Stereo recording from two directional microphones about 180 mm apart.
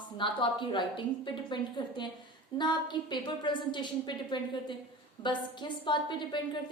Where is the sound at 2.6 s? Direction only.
25° left (ahead or behind).